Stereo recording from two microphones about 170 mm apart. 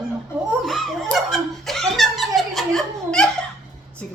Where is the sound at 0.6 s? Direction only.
Centre (ahead or behind).